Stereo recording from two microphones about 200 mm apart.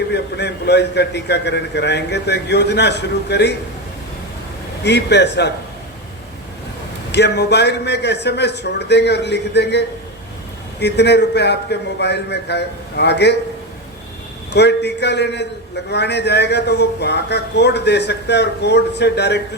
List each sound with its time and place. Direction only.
0.1 s a man's voice: 55° left (ahead or behind)
4.8 s a man's voice: 55° left (ahead or behind)
7.1 s a man's voice: 55° left (ahead or behind)
14.5 s a man's voice: 55° left (ahead or behind)